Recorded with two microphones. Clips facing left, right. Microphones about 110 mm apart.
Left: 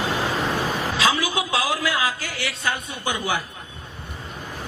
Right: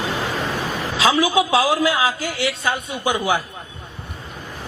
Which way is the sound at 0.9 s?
15° right (ahead or behind).